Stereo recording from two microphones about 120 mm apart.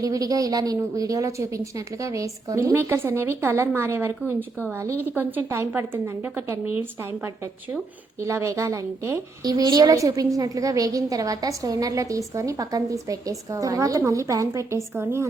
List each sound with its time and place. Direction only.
0.0 s a woman's voice: 30° right (ahead or behind)
8.2 s a woman's voice: 25° right (ahead or behind)